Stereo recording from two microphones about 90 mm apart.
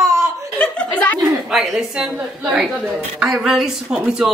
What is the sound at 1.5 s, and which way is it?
A woman's voice, centre (ahead or behind).